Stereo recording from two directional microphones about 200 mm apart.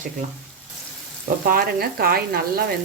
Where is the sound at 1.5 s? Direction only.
50° right (ahead or behind).